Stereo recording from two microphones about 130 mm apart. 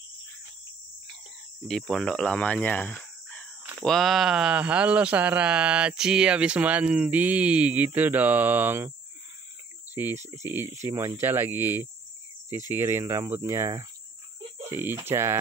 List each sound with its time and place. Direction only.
1.7 s speech: centre (ahead or behind); by 8.9 s 15° right (ahead or behind)
9.9 s speech: 15° right (ahead or behind)